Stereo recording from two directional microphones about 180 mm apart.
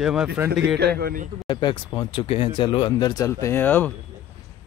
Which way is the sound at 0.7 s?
60° right (ahead or behind).